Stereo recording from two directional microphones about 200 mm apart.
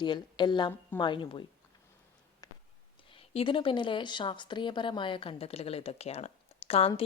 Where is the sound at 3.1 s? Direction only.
25° left (ahead or behind).